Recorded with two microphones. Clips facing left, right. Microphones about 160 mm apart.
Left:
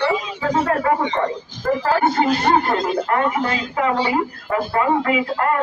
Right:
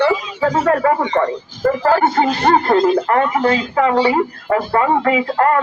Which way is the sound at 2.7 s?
50° right (ahead or behind).